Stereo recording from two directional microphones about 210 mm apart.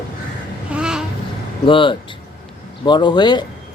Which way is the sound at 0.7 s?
5° right (ahead or behind).